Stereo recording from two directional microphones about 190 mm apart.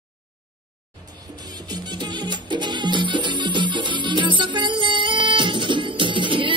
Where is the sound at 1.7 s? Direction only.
20° right (ahead or behind).